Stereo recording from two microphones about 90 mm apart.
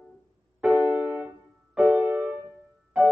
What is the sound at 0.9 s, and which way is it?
Music, 15° right (ahead or behind).